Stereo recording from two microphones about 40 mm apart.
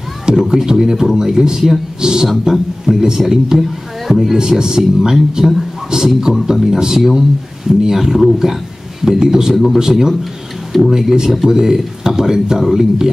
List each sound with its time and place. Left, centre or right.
0.3 s a man's voice: centre
9.5 s a man's voice: centre
9.8 s a man's voice: centre